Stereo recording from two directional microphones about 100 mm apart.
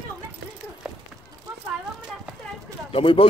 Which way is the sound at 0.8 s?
5° right (ahead or behind).